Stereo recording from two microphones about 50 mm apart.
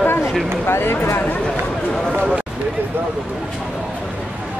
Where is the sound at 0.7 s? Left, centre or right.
Left.